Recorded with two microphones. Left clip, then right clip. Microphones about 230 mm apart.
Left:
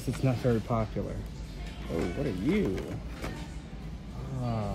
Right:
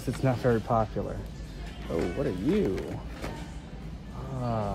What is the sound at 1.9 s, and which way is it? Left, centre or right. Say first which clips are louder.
Speech: right 3 dB; centre.